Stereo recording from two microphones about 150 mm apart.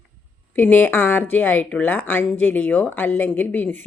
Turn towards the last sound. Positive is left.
turn(degrees=10)  # may be behind; listen again after turning